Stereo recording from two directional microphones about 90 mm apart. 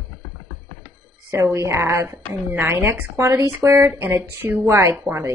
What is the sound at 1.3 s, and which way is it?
A woman's voice, 30° right (ahead or behind).